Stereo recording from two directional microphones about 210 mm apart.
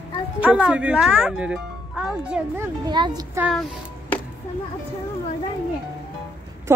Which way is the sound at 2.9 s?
20° right (ahead or behind).